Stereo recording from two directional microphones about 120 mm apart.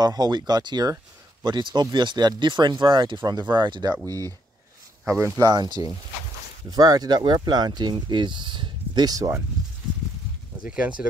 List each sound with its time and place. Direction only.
0.0 s speech: 35° right (ahead or behind)
5.4 s speech: 35° right (ahead or behind)
10.6 s speech: 10° right (ahead or behind)